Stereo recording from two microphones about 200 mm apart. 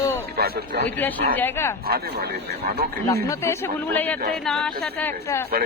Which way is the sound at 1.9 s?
50° right (ahead or behind).